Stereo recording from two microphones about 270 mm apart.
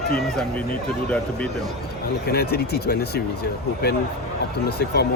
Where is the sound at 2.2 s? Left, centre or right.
Left.